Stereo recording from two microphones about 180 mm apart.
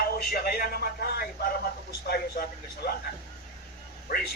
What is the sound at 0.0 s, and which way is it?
A man's voice, 60° left (ahead or behind).